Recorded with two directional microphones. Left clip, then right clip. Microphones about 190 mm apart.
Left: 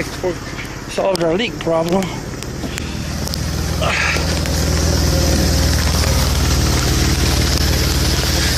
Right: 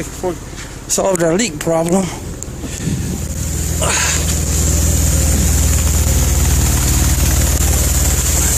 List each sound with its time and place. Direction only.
0.9 s speech: 45° right (ahead or behind)
3.8 s speech: 30° right (ahead or behind)